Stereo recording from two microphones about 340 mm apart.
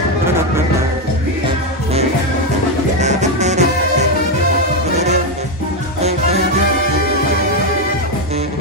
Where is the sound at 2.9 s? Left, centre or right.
Centre.